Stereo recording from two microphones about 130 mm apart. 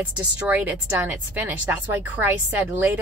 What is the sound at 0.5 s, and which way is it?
A woman's voice, 15° right (ahead or behind).